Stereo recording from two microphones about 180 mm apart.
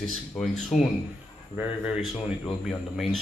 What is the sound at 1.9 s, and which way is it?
Speech, centre (ahead or behind).